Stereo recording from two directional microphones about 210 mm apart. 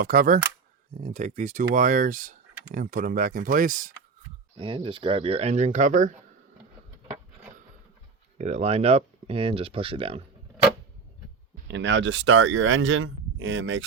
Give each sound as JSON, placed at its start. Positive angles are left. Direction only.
{"t": 0.0, "sound": "speech", "side_deg": -40}
{"t": 4.5, "sound": "speech", "side_deg": -25}
{"t": 8.4, "sound": "speech", "side_deg": -30}
{"t": 11.7, "sound": "speech", "side_deg": -60}